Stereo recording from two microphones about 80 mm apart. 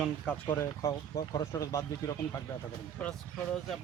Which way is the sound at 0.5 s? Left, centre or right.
Left.